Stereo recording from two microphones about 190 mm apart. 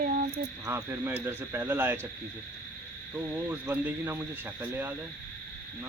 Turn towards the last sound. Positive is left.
turn(degrees=-10)  # may be behind; listen again after turning